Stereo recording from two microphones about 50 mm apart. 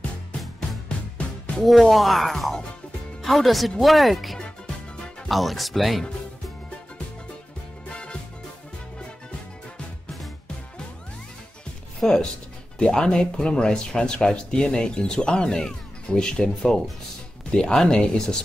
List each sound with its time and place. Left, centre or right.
0.6 s music: centre
1.6 s speech: centre
7.9 s music: centre
12.0 s speech: centre